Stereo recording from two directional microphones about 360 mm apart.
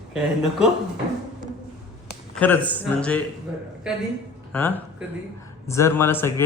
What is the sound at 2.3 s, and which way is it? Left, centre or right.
Speech, centre.